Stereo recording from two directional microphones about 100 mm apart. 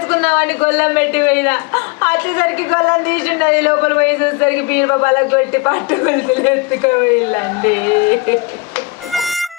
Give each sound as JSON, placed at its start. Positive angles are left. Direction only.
{"t": 0.1, "sound": "a man's voice", "side_deg": 25}